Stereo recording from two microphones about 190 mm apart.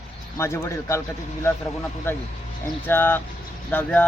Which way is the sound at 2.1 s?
10° left (ahead or behind).